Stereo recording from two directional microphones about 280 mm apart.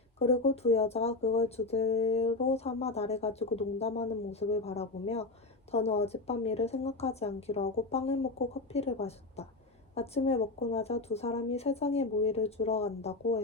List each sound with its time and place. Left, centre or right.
0.2 s speech: left